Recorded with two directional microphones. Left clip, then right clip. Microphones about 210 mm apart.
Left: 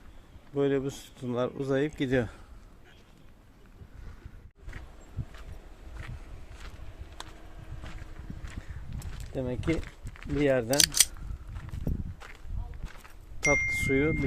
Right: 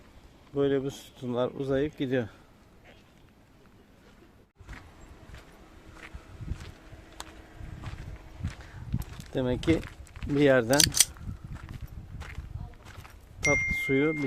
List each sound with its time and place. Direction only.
0.5 s speech: centre (ahead or behind)
9.3 s speech: 25° right (ahead or behind)
10.7 s speech: centre (ahead or behind)
12.2 s walk: 5° right (ahead or behind)
13.4 s a sound: 5° left (ahead or behind)
14.0 s speech: 5° right (ahead or behind)